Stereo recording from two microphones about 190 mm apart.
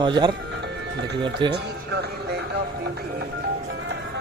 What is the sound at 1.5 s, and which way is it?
Music, 60° right (ahead or behind).